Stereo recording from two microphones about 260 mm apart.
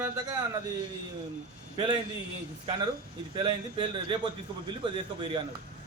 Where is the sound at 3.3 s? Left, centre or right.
Centre.